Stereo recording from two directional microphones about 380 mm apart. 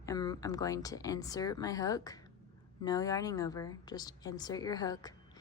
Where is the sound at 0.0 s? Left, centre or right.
Centre.